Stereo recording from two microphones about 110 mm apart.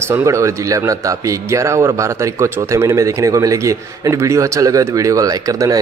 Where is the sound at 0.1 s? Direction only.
30° right (ahead or behind).